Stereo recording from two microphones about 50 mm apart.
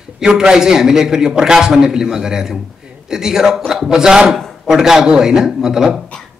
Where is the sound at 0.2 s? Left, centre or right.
Centre.